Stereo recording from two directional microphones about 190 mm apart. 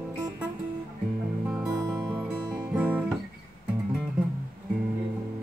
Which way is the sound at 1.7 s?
20° right (ahead or behind).